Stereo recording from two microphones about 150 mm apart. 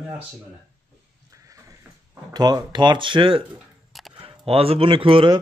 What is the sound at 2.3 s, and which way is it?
A man's voice, 25° right (ahead or behind).